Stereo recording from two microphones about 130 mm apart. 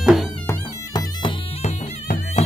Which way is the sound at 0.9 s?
30° left (ahead or behind).